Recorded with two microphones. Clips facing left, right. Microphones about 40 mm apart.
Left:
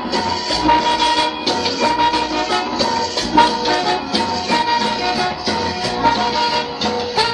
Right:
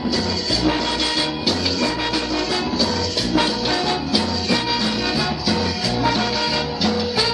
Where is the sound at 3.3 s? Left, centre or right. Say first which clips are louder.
Left 7 dB; left.